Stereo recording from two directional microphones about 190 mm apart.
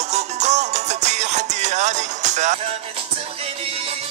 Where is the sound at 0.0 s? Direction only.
35° right (ahead or behind).